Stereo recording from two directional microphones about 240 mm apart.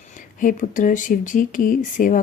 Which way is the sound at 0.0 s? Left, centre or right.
Left.